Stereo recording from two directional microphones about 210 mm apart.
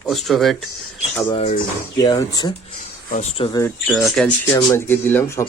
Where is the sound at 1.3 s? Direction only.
30° left (ahead or behind).